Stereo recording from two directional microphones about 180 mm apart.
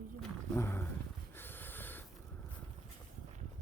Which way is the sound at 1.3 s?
10° left (ahead or behind).